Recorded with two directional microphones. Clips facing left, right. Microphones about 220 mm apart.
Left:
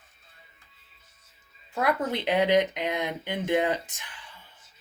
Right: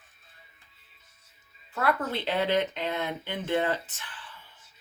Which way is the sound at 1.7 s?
15° left (ahead or behind).